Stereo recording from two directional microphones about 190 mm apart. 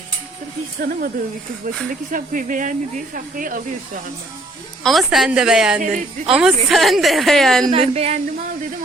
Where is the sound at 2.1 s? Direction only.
45° right (ahead or behind).